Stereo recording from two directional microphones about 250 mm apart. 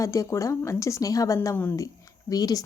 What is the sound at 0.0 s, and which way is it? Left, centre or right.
A woman's voice, centre.